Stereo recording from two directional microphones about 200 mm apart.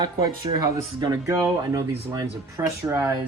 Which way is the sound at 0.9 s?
20° right (ahead or behind).